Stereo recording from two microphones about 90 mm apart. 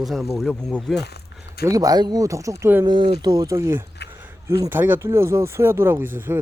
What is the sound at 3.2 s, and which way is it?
Speech, 40° right (ahead or behind).